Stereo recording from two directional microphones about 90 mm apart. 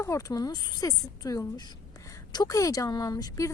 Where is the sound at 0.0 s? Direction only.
35° left (ahead or behind).